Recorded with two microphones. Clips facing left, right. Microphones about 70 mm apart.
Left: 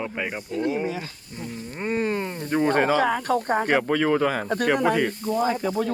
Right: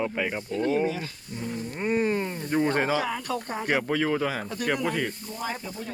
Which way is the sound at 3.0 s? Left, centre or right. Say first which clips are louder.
Left 8 dB; left.